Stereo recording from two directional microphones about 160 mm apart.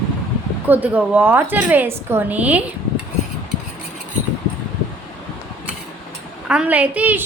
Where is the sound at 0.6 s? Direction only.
10° right (ahead or behind).